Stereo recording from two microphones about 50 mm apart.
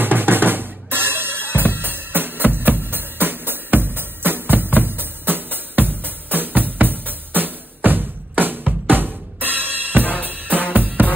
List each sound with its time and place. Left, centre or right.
0.0 s drum kit: right
6.2 s music: right
8.8 s drum kit: right
10.7 s music: right